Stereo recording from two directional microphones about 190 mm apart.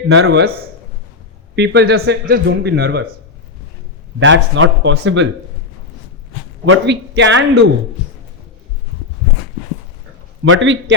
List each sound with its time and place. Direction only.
0.1 s speech: 70° right (ahead or behind)
1.5 s a man's voice: 65° right (ahead or behind)
4.2 s speech: 80° right
6.7 s speech: 70° right (ahead or behind)
10.4 s speech: 85° right